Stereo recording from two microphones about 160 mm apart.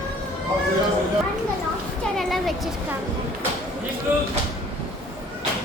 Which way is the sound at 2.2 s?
Centre (ahead or behind).